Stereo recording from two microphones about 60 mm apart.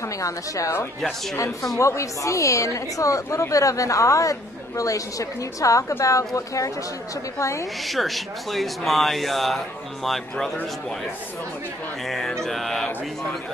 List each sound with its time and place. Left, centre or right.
0.2 s a woman's voice: left
7.3 s a woman's voice: left
7.8 s speech: centre
12.1 s speech: centre